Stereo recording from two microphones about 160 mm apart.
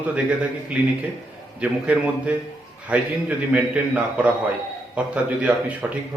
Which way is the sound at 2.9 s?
10° right (ahead or behind).